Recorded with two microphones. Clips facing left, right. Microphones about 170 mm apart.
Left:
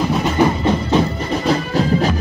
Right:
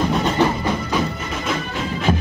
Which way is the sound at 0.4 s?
25° left (ahead or behind).